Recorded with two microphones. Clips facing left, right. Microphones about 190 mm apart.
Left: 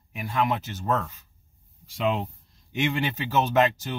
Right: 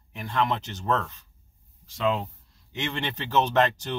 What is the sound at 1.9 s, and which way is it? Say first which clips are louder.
Speech: even; 20° left (ahead or behind).